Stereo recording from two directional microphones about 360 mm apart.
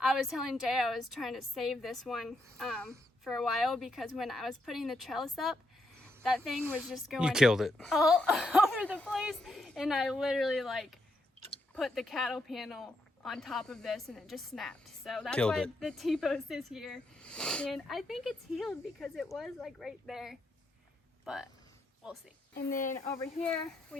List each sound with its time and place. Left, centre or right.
0.0 s speech: centre
22.5 s speech: left
23.1 s speech: centre